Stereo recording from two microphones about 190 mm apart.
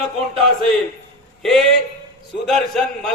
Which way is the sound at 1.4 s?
Centre (ahead or behind).